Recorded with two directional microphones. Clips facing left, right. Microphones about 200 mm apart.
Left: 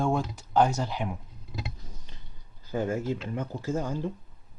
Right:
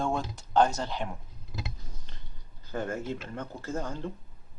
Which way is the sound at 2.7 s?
10° left (ahead or behind).